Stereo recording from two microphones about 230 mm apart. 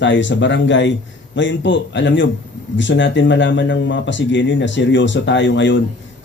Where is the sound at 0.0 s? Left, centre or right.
Left.